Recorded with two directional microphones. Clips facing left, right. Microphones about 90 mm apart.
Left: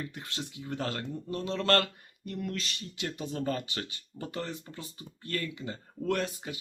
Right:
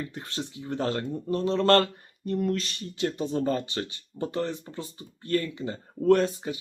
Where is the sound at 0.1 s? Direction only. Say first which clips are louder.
Right 5 dB; 35° right (ahead or behind).